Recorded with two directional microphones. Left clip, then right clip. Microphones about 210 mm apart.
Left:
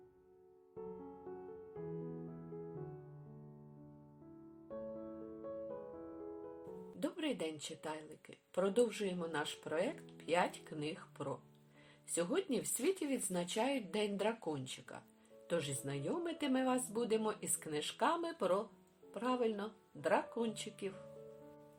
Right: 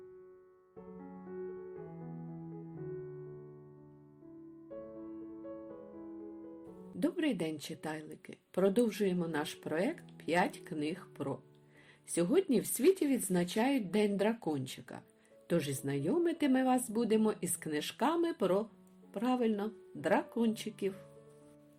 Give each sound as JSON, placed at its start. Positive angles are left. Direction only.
{"t": 7.0, "sound": "a woman's voice", "side_deg": -30}